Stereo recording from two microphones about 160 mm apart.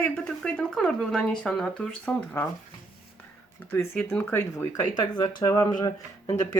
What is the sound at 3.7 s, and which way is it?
Speech, 15° left (ahead or behind).